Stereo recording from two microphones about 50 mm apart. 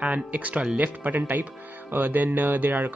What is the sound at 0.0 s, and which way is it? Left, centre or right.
Speech, right.